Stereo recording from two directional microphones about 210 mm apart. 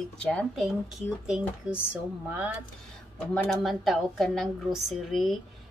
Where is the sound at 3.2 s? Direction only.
5° left (ahead or behind).